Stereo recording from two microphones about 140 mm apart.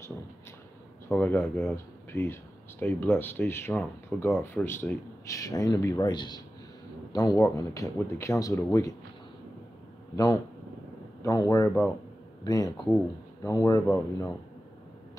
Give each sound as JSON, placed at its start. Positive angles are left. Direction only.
{"t": 1.0, "sound": "speech", "side_deg": 15}
{"t": 10.1, "sound": "speech", "side_deg": 25}